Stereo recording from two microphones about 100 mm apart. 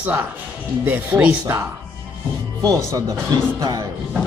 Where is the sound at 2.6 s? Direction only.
40° right (ahead or behind).